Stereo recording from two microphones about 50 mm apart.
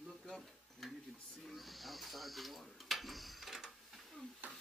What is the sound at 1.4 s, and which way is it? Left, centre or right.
Snake, centre.